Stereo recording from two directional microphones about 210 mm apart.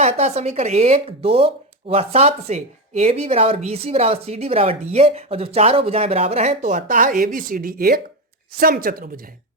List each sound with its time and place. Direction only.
0.0 s speech: 30° right (ahead or behind)